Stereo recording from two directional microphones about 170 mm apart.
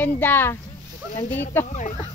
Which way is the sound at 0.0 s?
10° left (ahead or behind).